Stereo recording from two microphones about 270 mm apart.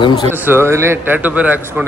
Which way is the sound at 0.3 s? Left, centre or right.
Centre.